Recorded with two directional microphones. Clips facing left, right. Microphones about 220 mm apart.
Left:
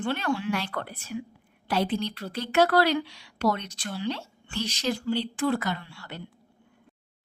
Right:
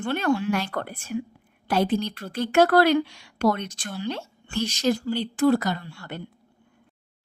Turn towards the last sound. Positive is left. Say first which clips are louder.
# right 3 dB
turn(degrees=-50)  # may be behind; listen again after turning